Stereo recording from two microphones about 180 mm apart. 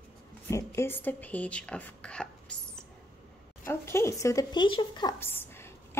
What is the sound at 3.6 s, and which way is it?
Speech, 15° left (ahead or behind).